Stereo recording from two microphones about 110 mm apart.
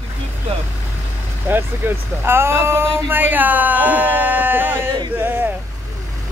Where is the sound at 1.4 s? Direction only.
20° right (ahead or behind).